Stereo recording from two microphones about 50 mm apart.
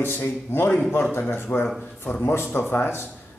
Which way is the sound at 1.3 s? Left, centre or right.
Left.